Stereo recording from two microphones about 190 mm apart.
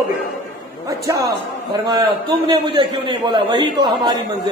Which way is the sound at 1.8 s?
20° right (ahead or behind).